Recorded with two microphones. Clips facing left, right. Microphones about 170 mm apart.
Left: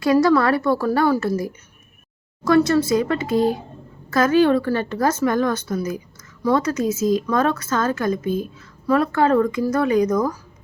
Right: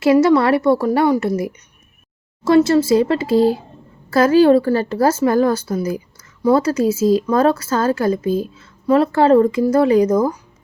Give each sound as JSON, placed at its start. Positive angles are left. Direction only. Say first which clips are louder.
{"t": 0.0, "sound": "a woman's voice", "louder": "right 3 dB", "side_deg": -25}
{"t": 2.4, "sound": "a woman's voice", "louder": "right 3 dB", "side_deg": -25}